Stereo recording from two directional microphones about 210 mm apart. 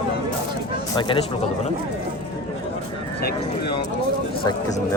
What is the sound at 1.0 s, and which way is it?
Speech, 25° left (ahead or behind).